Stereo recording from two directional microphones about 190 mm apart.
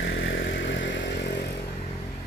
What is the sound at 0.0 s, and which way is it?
Vehicle, 65° left (ahead or behind).